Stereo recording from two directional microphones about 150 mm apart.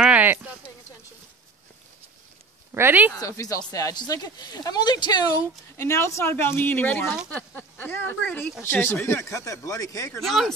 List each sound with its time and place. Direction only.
0.0 s a sound: 10° right (ahead or behind)
2.7 s speech: 15° right (ahead or behind)
3.1 s speech: 20° left (ahead or behind)
10.2 s speech: centre (ahead or behind)